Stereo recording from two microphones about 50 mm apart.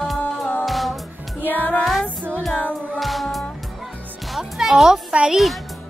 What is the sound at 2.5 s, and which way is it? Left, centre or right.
Music, left.